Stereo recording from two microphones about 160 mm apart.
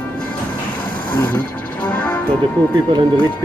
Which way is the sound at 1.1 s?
10° left (ahead or behind).